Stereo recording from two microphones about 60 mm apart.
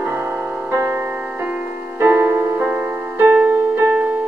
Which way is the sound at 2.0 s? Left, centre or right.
Right.